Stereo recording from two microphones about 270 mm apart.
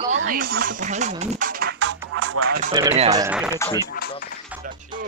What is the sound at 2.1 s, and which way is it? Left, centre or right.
Music, right.